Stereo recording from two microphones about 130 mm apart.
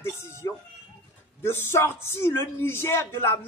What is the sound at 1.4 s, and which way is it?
A man's voice, 20° left (ahead or behind).